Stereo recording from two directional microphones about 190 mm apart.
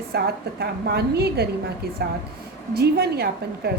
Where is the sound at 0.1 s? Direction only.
60° right (ahead or behind).